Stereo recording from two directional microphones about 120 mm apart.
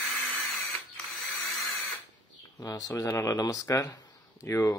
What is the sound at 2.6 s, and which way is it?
Speech, 25° left (ahead or behind).